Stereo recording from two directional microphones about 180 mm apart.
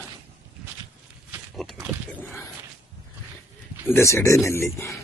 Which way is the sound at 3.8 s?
15° left (ahead or behind).